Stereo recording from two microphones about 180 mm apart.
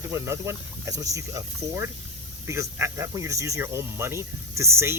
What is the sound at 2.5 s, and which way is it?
Speech, 15° right (ahead or behind).